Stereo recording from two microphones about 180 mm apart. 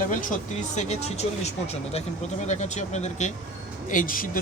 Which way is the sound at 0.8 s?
35° left (ahead or behind).